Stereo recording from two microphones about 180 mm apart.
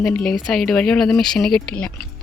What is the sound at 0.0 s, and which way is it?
Speech, 5° left (ahead or behind).